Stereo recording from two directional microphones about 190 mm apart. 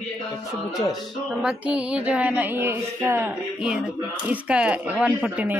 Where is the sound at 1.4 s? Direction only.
5° right (ahead or behind).